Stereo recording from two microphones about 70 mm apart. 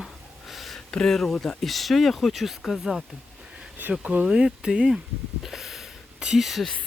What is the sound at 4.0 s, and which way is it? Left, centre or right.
Speech, right.